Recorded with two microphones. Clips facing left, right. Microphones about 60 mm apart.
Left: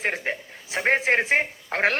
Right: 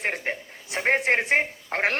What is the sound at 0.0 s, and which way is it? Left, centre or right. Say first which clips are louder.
A man's voice: left 1 dB; centre.